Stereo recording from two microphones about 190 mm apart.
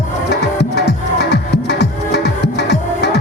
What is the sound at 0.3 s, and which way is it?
Music, 60° left (ahead or behind).